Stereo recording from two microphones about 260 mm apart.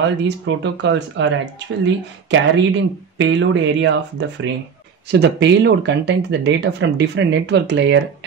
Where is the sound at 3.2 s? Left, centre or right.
Right.